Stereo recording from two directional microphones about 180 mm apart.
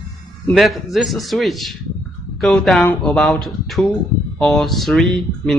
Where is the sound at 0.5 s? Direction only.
Centre (ahead or behind).